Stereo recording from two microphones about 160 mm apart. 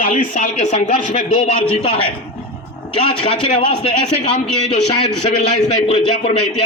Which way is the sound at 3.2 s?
35° left (ahead or behind).